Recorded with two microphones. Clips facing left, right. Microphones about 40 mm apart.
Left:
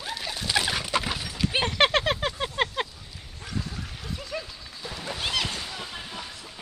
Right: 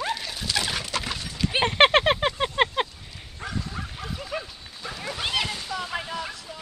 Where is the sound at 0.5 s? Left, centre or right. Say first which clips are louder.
Left 2 dB; centre.